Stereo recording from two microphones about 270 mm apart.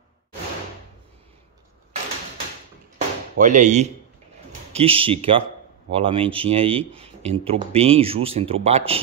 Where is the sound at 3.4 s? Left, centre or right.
Right.